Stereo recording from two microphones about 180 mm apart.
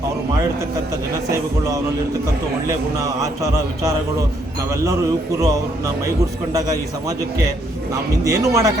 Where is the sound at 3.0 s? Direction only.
20° right (ahead or behind).